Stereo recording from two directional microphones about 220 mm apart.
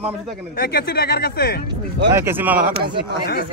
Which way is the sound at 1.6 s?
20° right (ahead or behind).